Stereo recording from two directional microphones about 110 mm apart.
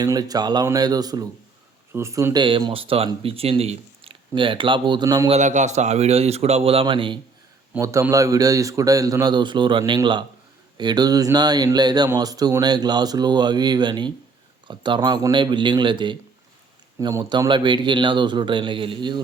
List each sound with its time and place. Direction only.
0.0 s speech: 35° right (ahead or behind)
1.9 s speech: 25° right (ahead or behind)
2.3 s speech: 45° right (ahead or behind); by 4.2 s 60° right (ahead or behind)
4.4 s speech: 50° right (ahead or behind)
5.0 s speech: 35° right (ahead or behind)
5.3 s a man's voice: 90° right; by 7.2 s 50° right (ahead or behind)
7.8 s a man's voice: 25° right (ahead or behind); by 19.2 s 45° right (ahead or behind)